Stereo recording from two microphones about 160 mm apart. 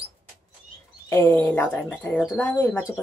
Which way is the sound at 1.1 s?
15° left (ahead or behind).